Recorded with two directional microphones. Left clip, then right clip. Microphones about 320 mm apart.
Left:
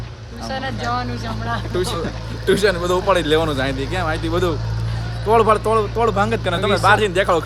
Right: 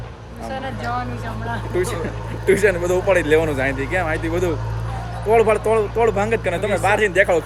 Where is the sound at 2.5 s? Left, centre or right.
Centre.